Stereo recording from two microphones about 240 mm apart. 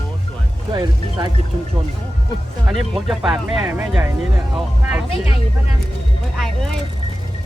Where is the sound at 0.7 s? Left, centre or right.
Centre.